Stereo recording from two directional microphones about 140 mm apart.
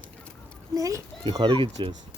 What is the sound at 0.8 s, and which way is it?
Speech, 25° right (ahead or behind).